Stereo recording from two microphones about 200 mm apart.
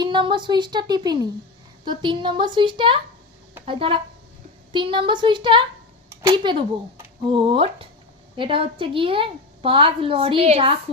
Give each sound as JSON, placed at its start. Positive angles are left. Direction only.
{"t": 0.0, "sound": "a woman's voice", "side_deg": -25}
{"t": 6.1, "sound": "a sound", "side_deg": -10}
{"t": 6.4, "sound": "a woman's voice", "side_deg": -25}